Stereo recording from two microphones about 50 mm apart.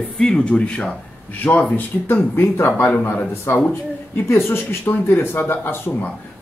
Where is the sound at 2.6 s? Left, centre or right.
Left.